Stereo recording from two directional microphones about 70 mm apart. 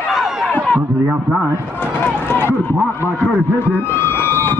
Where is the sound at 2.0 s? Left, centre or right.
Left.